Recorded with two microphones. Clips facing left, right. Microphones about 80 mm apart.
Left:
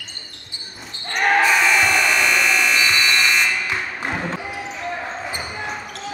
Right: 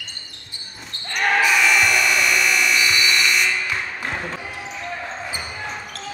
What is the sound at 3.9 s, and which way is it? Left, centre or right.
Basketball bounce, left.